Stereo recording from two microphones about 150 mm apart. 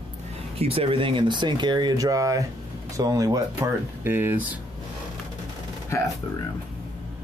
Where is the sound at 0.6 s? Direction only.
40° right (ahead or behind); by 4.4 s 15° right (ahead or behind).